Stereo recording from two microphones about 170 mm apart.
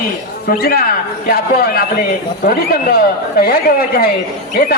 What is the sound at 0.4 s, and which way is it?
Speech, 60° left (ahead or behind).